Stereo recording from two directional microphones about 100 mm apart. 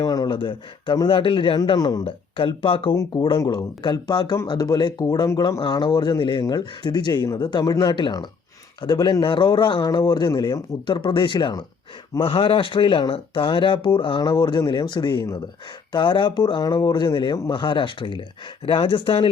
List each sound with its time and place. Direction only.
0.0 s a sound: 40° left (ahead or behind)
0.3 s speech: 55° left (ahead or behind)
1.5 s speech: 45° left (ahead or behind)
2.0 s speech: 60° left (ahead or behind)
2.9 s speech: 35° left (ahead or behind)
12.2 s speech: 65° left (ahead or behind)